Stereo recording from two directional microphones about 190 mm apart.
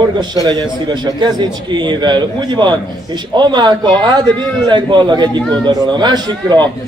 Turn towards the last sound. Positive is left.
turn(degrees=-20)  # may be behind; listen again after turning